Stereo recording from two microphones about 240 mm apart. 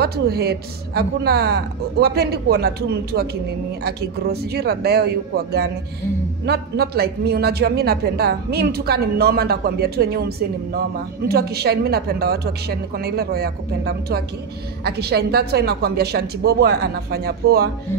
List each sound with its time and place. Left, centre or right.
0.0 s speech: right